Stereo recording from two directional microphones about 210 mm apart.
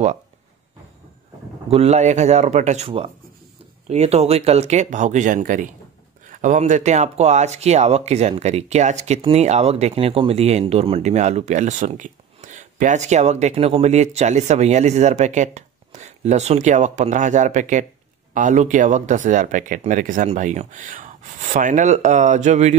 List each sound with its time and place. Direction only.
1.7 s speech: 30° right (ahead or behind)